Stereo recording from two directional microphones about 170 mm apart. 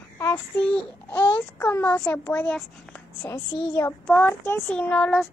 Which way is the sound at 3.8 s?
10° left (ahead or behind).